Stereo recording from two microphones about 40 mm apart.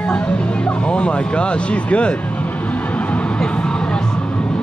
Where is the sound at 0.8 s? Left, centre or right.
Left.